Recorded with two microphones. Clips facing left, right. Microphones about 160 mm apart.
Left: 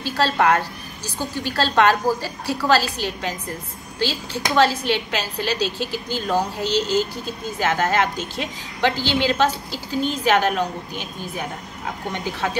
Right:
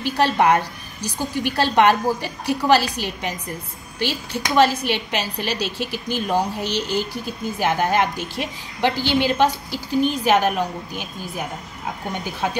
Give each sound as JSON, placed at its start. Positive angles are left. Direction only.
{"t": 0.0, "sound": "a woman's voice", "side_deg": -15}